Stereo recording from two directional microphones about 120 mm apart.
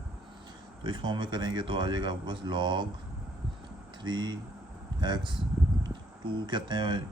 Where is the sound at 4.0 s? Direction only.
40° right (ahead or behind).